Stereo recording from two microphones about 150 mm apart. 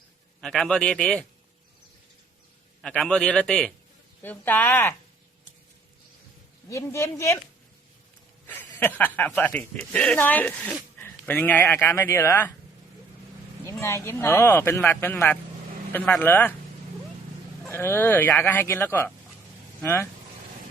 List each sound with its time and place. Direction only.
0.4 s a man's voice: 5° left (ahead or behind)
2.8 s a man's voice: 5° left (ahead or behind)
6.7 s speech: 20° left (ahead or behind)
8.4 s speech: 10° left (ahead or behind)
13.8 s speech: 20° left (ahead or behind)
17.7 s speech: 15° left (ahead or behind)